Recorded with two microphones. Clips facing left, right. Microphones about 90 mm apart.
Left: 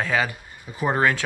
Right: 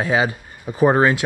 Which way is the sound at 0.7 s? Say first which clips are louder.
Right 9 dB; 35° right (ahead or behind).